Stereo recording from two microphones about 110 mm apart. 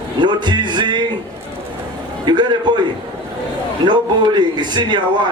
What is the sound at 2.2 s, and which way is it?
Speech, 45° right (ahead or behind).